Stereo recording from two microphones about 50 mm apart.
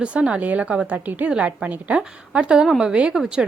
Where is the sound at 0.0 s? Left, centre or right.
Right.